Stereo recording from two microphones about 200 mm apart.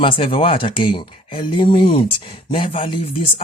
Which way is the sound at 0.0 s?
25° left (ahead or behind).